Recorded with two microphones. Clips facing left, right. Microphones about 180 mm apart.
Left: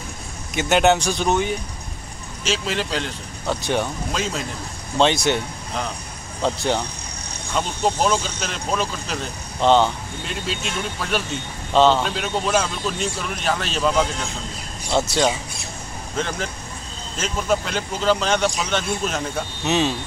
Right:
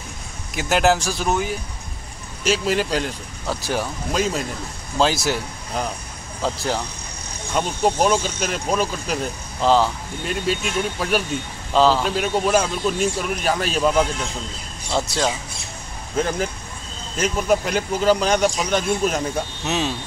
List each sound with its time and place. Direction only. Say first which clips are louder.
0.6 s speech: left 1 dB; centre (ahead or behind)
16.2 s speech: right 4 dB; 10° right (ahead or behind)